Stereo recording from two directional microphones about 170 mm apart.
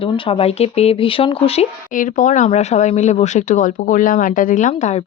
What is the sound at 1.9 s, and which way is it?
Speech, 50° left (ahead or behind).